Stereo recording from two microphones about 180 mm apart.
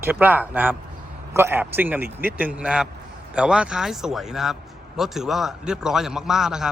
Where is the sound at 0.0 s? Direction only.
10° right (ahead or behind).